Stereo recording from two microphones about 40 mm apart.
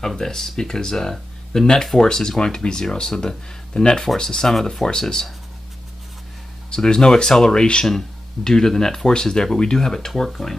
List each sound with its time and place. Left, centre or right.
0.0 s speech: centre
6.7 s speech: centre